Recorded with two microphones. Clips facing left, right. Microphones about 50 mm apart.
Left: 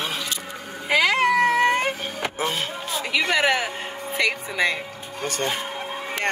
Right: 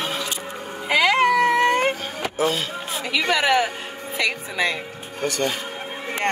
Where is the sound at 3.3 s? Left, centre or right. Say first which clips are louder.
Right 3 dB; centre.